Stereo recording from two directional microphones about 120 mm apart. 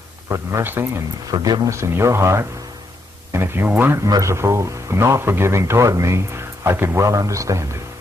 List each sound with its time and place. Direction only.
0.3 s speech: 25° right (ahead or behind)
1.3 s speech: 35° right (ahead or behind)